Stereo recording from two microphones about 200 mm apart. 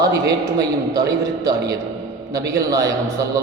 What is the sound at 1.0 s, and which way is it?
A man's voice, 15° right (ahead or behind).